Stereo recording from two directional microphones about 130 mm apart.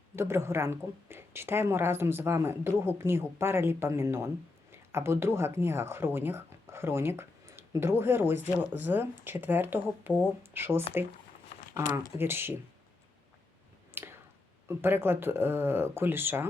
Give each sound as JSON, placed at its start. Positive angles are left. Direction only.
{"t": 0.2, "sound": "a woman's voice", "side_deg": -20}
{"t": 11.9, "sound": "speech", "side_deg": -20}
{"t": 14.0, "sound": "a sound", "side_deg": -15}
{"t": 14.7, "sound": "speech", "side_deg": -20}